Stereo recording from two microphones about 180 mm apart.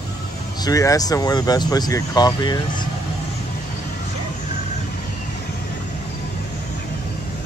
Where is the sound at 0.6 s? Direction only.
20° left (ahead or behind).